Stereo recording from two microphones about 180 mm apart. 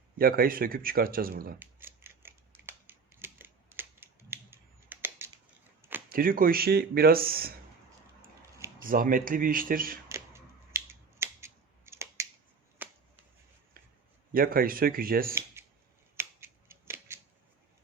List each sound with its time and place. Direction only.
0.2 s speech: 55° right (ahead or behind)
1.5 s scissors: 10° right (ahead or behind)
6.1 s speech: 55° right (ahead or behind)
8.8 s speech: 50° right (ahead or behind)
10.1 s scissors: 15° right (ahead or behind)
12.8 s a sound: 10° right (ahead or behind)
14.3 s speech: 55° right (ahead or behind)
15.6 s scissors: 15° right (ahead or behind)